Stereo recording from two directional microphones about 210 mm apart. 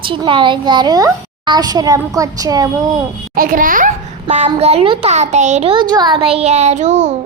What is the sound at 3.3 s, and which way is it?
A child's voice, 40° right (ahead or behind).